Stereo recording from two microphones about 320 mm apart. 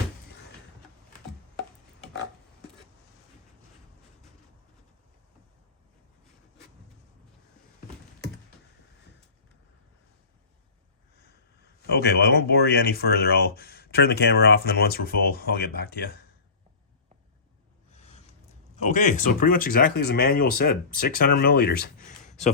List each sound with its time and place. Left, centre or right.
11.9 s speech: left
18.8 s speech: left